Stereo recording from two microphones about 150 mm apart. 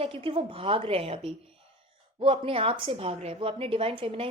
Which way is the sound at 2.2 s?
35° right (ahead or behind).